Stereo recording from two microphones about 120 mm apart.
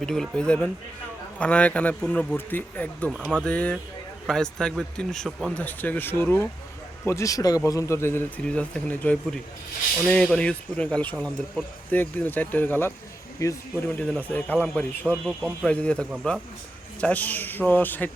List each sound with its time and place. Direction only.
0.0 s speech: 5° left (ahead or behind); by 8.3 s 20° left (ahead or behind)
8.4 s speech: 10° left (ahead or behind); by 13.6 s 25° left (ahead or behind)
13.8 s speech: 10° left (ahead or behind)
15.3 s speech: 5° right (ahead or behind)
15.6 s speech: 10° left (ahead or behind)